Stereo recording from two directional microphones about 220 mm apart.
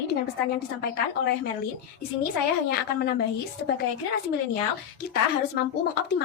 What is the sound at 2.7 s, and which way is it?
Speech, 45° left (ahead or behind).